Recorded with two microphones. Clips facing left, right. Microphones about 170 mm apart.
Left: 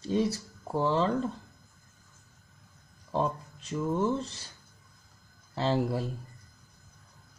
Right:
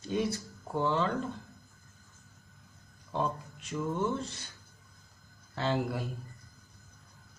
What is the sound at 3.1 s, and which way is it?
Speech, 30° left (ahead or behind).